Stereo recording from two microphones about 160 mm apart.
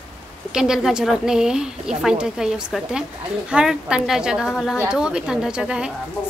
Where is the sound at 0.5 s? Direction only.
5° right (ahead or behind).